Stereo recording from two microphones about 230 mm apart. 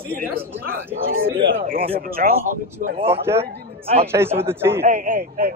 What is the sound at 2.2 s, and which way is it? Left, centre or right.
Speech, right.